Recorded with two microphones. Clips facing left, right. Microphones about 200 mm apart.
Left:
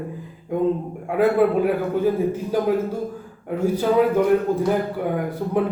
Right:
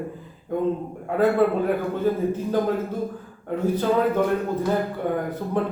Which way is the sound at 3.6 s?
10° left (ahead or behind).